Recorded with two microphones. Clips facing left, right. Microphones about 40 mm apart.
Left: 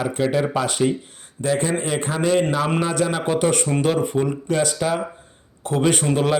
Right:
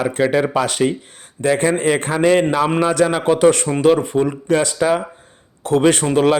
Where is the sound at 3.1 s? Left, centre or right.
Right.